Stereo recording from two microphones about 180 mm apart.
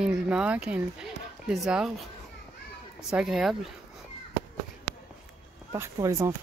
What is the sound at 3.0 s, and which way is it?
Speech, 5° right (ahead or behind).